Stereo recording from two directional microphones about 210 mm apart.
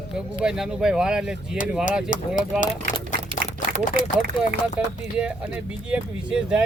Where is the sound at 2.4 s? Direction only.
40° left (ahead or behind).